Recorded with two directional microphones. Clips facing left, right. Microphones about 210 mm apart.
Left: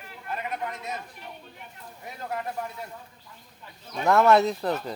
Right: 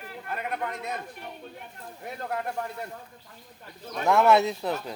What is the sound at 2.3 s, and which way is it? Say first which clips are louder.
Speech: even; 55° right (ahead or behind).